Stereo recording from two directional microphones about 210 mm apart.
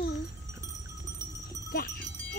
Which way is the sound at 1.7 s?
45° left (ahead or behind).